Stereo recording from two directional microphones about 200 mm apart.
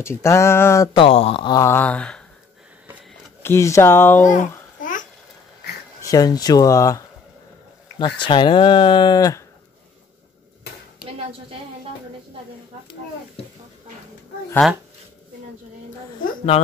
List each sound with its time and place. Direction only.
0.0 s speech: 15° left (ahead or behind)
0.9 s speech: 30° left (ahead or behind); by 2.2 s 5° left (ahead or behind)
3.4 s speech: 15° left (ahead or behind)
4.2 s babbling: 40° left (ahead or behind)
6.0 s speech: 20° left (ahead or behind)
8.0 s speech: 25° left (ahead or behind)
14.6 s speech: centre (ahead or behind)